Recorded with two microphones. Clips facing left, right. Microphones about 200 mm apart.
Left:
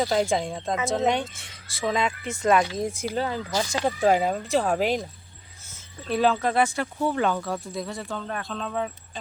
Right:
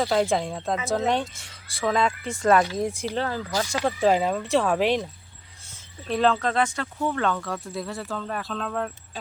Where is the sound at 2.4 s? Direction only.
15° left (ahead or behind).